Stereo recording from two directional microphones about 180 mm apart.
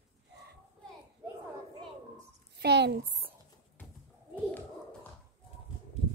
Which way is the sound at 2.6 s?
70° right (ahead or behind).